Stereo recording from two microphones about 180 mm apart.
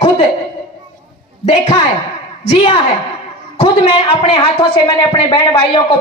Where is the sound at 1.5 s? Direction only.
35° left (ahead or behind).